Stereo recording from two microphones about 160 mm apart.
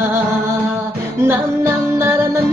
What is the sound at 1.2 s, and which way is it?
Music, 15° right (ahead or behind).